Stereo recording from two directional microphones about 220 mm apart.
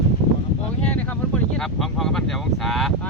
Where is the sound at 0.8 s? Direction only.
5° left (ahead or behind).